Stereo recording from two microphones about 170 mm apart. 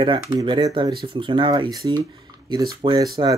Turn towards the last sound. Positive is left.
turn(degrees=-25)  # may be behind; listen again after turning